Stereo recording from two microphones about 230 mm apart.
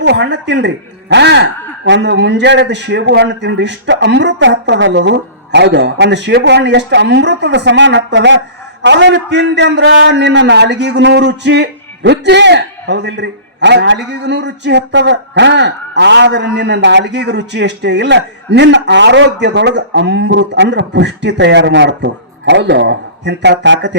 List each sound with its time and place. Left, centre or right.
0.0 s a man's voice: right